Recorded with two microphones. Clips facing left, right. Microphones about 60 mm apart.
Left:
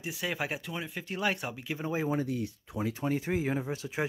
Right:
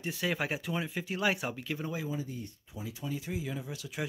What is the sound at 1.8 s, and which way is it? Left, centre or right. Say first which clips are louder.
Speech: left 5 dB; left.